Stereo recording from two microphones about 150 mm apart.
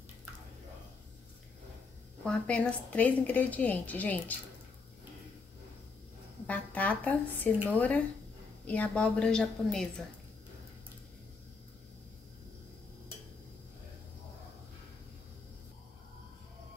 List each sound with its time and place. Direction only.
2.2 s a woman's voice: 5° left (ahead or behind)
6.4 s a woman's voice: 10° left (ahead or behind)